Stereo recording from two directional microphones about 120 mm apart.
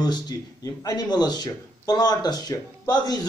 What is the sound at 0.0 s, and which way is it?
Speech, 35° left (ahead or behind).